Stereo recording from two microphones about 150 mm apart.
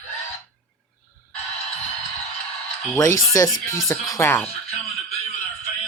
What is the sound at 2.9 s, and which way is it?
Speech, 20° left (ahead or behind).